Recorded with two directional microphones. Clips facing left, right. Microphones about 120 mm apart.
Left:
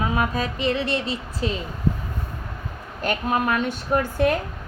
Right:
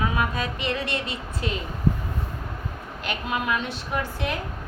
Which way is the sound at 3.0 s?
40° left (ahead or behind).